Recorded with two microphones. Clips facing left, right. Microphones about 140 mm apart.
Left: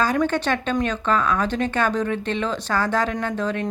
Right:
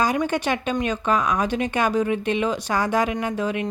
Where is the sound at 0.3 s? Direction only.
10° right (ahead or behind).